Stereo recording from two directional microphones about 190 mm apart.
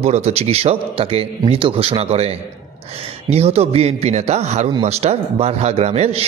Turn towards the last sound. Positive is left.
turn(degrees=-35)  # may be behind; listen again after turning